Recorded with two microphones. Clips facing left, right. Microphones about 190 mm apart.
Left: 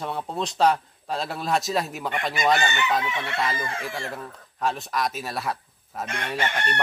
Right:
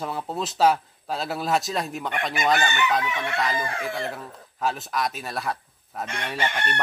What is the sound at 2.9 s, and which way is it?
Chicken, 25° left (ahead or behind).